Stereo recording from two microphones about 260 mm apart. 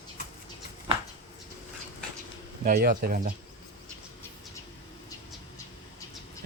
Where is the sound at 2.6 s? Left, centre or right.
Right.